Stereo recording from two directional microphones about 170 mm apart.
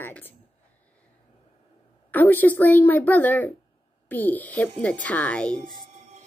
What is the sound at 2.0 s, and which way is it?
Speech, 10° left (ahead or behind).